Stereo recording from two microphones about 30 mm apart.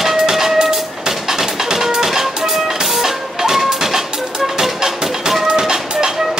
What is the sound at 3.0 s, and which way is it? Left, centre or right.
Music, centre.